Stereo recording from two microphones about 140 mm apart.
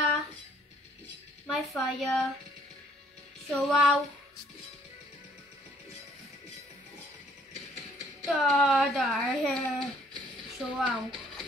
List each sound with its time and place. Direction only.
1.5 s a child's voice: centre (ahead or behind)
3.4 s a child's voice: centre (ahead or behind)
8.3 s a child's voice: centre (ahead or behind)